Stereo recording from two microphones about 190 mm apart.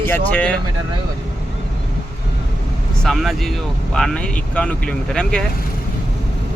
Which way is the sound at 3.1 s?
Centre (ahead or behind).